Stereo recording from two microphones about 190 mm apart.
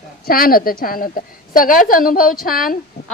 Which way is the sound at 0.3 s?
50° left (ahead or behind).